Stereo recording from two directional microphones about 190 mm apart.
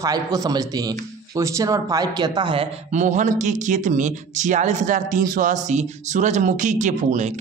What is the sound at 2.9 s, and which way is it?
Speech, 40° right (ahead or behind).